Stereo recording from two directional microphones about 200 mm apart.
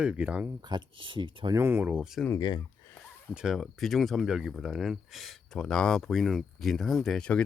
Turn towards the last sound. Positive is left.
turn(degrees=5)  # may be behind; listen again after turning